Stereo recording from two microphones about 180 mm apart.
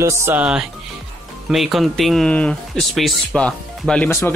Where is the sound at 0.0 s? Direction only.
15° right (ahead or behind).